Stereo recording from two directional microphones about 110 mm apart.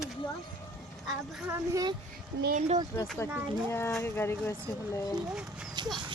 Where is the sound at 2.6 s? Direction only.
90° right.